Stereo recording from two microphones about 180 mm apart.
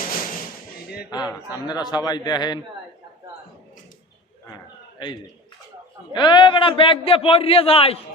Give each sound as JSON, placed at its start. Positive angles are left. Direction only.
{"t": 1.6, "sound": "a man's voice", "side_deg": 25}
{"t": 4.9, "sound": "a man's voice", "side_deg": 25}